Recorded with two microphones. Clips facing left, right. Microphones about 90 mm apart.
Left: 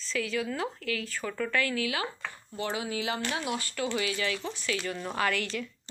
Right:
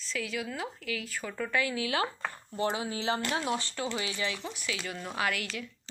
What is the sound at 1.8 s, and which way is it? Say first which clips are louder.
Speech: right 1 dB; 30° right (ahead or behind).